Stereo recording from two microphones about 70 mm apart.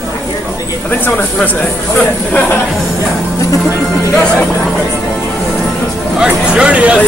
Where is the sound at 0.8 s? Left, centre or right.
Left.